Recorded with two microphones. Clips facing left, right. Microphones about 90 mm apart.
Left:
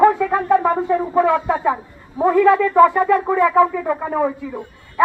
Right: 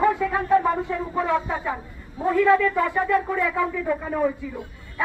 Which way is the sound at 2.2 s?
65° left (ahead or behind).